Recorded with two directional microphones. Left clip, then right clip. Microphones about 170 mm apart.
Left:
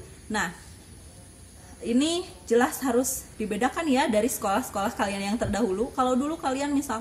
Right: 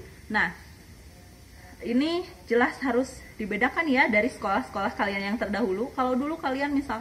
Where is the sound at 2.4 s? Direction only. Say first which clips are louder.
Left 1 dB; 35° left (ahead or behind).